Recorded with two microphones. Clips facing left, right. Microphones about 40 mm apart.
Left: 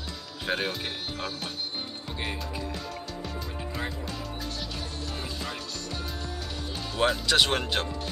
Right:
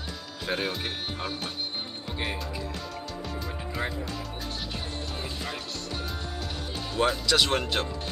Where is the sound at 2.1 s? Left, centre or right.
Centre.